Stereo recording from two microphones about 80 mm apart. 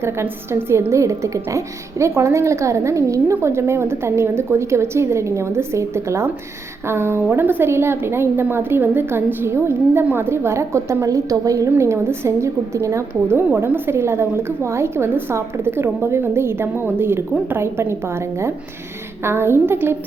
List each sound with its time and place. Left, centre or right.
0.0 s a woman's voice: right
11.8 s a woman's voice: right